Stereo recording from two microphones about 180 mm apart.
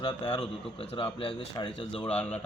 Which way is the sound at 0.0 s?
30° left (ahead or behind).